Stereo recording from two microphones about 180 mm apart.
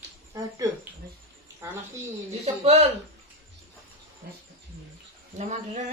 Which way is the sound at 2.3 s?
35° right (ahead or behind).